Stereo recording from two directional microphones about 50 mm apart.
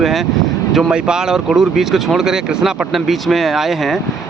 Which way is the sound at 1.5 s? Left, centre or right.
Centre.